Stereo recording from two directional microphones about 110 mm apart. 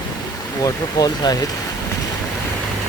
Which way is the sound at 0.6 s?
35° left (ahead or behind).